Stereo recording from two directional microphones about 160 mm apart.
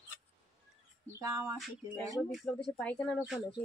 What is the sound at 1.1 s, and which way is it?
Speech, 15° right (ahead or behind).